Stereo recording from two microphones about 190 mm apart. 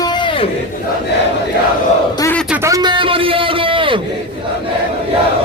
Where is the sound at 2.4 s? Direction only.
10° right (ahead or behind); by 4.0 s 25° right (ahead or behind).